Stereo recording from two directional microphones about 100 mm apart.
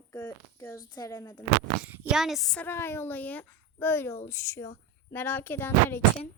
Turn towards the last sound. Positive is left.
turn(degrees=20)  # may be behind; listen again after turning